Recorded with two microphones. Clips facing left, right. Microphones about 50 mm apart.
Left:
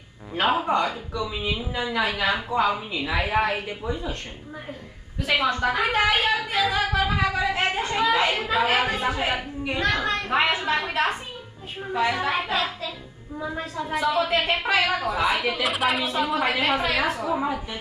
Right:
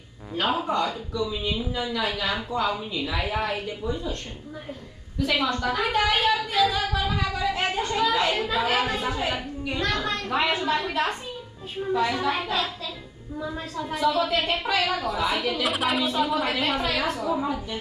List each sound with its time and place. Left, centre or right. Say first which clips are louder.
0.4 s a woman's voice: left 3 dB; left
5.2 s a woman's voice: left 2 dB; centre
7.4 s a sound: left 1 dB; centre
8.2 s a woman's voice: left 2 dB; left
15.0 s a woman's voice: left 2 dB; left
15.6 s a woman's voice: left 1 dB; centre
17.3 s a woman's voice: left 1 dB; left